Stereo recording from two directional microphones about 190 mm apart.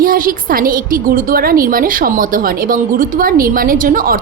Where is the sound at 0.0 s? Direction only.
50° right (ahead or behind).